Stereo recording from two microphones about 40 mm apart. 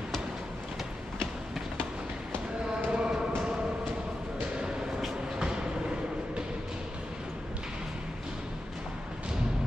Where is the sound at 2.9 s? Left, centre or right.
Centre.